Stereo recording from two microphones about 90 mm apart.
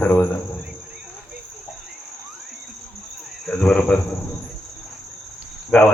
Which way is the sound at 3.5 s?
5° left (ahead or behind).